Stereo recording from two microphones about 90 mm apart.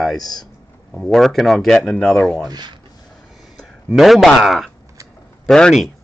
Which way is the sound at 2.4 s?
50° right (ahead or behind).